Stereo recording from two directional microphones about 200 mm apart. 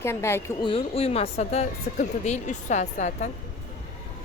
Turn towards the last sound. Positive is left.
turn(degrees=35)  # may be behind; listen again after turning